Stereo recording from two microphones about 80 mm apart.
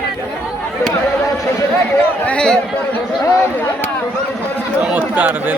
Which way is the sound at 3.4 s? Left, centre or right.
Left.